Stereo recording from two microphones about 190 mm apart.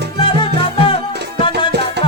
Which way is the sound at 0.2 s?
25° left (ahead or behind).